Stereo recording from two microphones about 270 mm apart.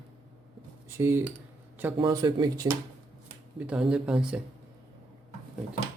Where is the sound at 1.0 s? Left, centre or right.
Centre.